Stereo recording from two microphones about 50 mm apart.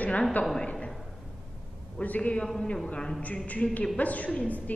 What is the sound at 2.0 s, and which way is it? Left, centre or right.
Speech, left.